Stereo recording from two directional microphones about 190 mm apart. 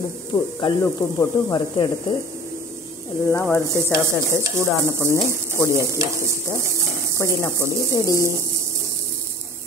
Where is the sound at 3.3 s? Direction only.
10° left (ahead or behind).